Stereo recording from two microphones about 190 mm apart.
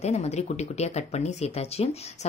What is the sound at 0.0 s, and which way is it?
Speech, 35° left (ahead or behind).